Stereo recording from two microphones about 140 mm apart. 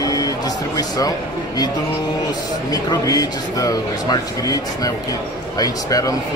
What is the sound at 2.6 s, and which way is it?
A man's voice, 25° left (ahead or behind).